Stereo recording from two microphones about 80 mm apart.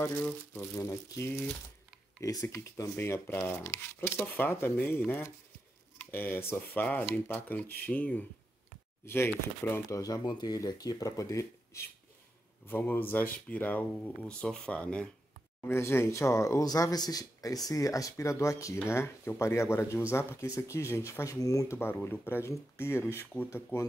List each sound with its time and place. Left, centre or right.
0.0 s speech: left
0.8 s speech: left
3.0 s speech: left
9.0 s speech: left
9.9 s speech: left
10.2 s speech: left
12.6 s speech: left
15.7 s speech: left
21.7 s speech: left